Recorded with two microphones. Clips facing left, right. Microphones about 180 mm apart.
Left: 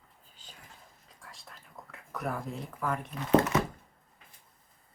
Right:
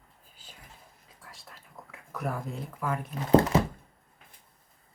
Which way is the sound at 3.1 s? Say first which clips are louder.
Right 3 dB; 30° right (ahead or behind).